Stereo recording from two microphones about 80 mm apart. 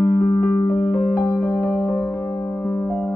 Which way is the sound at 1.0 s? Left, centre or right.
Left.